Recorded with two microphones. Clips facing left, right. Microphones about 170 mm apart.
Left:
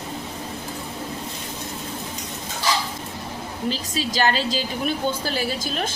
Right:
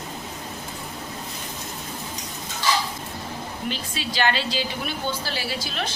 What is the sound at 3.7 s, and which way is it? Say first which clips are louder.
A woman's voice: left 6 dB; 40° left (ahead or behind).